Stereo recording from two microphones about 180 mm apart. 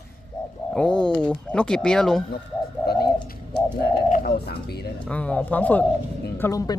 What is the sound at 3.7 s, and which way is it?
Speech, 55° left (ahead or behind).